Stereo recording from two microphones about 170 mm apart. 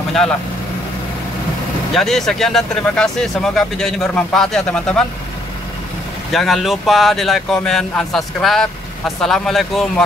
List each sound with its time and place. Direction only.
2.0 s speech: centre (ahead or behind)
6.3 s speech: centre (ahead or behind)